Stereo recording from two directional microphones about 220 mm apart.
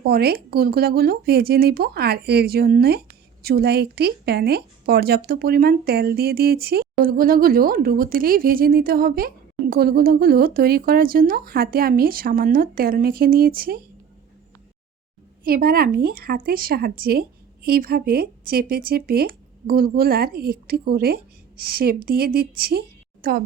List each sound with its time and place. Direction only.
0.0 s a woman's voice: 45° right (ahead or behind)
15.4 s a woman's voice: 40° right (ahead or behind)